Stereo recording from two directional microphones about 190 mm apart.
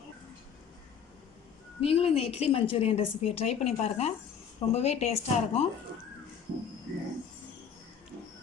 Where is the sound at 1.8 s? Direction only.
30° left (ahead or behind).